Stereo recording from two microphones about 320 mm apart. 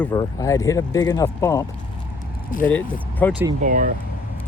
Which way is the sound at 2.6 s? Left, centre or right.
Centre.